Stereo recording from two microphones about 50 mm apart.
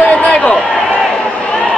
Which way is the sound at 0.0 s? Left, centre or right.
Left.